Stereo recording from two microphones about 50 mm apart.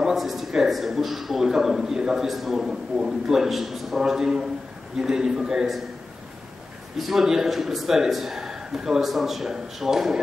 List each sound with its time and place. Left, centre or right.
0.0 s a man's voice: centre
7.0 s a man's voice: centre